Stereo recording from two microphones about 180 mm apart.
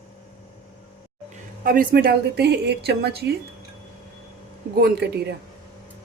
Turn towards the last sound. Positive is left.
turn(degrees=-60)  # may be behind; listen again after turning